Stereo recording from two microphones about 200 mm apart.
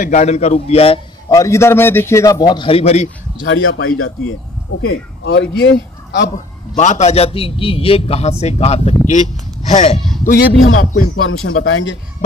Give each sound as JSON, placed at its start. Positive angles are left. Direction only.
{"t": 0.0, "sound": "a man's voice", "side_deg": 35}
{"t": 1.3, "sound": "a man's voice", "side_deg": 15}
{"t": 3.4, "sound": "speech", "side_deg": 85}
{"t": 4.8, "sound": "a man's voice", "side_deg": 75}
{"t": 6.8, "sound": "a man's voice", "side_deg": 35}
{"t": 9.9, "sound": "a sound", "side_deg": 0}
{"t": 10.2, "sound": "speech", "side_deg": 45}
{"t": 11.2, "sound": "speech", "side_deg": 90}